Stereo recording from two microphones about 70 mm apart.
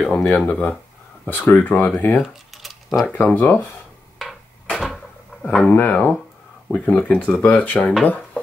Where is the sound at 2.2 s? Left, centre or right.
Centre.